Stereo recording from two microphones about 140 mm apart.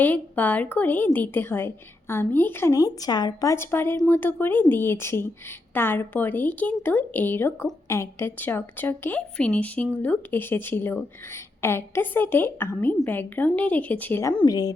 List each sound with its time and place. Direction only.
0.0 s a woman's voice: 10° left (ahead or behind); by 14.7 s 25° left (ahead or behind)